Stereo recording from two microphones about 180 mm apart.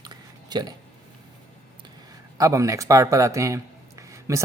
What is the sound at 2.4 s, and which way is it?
A man's voice, 20° right (ahead or behind).